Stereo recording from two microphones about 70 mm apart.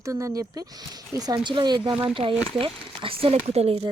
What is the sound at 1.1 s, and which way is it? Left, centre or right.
Speech, right.